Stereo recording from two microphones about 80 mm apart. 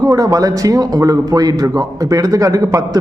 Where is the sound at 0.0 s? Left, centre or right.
Right.